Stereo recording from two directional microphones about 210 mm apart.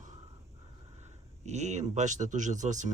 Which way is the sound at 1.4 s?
30° right (ahead or behind).